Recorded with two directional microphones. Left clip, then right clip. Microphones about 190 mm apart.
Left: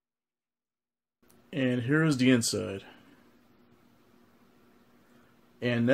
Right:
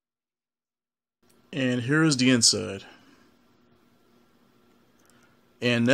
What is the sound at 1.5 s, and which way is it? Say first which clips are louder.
Speech: right 2 dB; 20° right (ahead or behind).